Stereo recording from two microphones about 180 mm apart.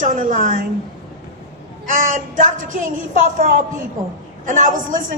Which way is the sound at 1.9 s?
45° right (ahead or behind).